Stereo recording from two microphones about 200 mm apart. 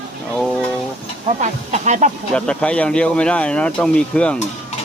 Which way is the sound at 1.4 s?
35° right (ahead or behind).